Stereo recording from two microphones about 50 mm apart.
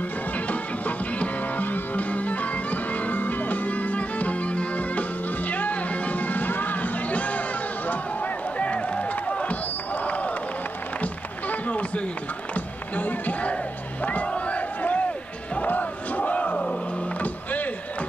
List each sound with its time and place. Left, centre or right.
0.5 s music: left
11.0 s run: left
12.5 s a sound: left
14.0 s crowd: left
17.2 s music: left